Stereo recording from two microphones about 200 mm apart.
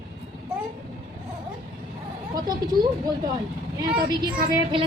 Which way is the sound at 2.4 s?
20° right (ahead or behind).